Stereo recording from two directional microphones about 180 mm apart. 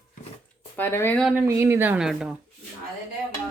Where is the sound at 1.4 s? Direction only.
10° right (ahead or behind).